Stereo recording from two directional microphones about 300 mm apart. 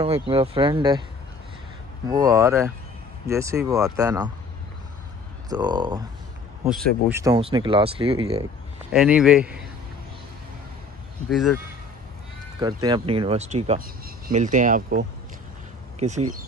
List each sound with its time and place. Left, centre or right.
0.0 s speech: centre
2.0 s speech: centre
5.5 s speech: centre
8.9 s a man's voice: centre
11.2 s a man's voice: centre
12.5 s speech: centre